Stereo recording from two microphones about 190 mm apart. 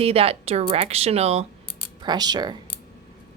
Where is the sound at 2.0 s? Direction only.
20° right (ahead or behind).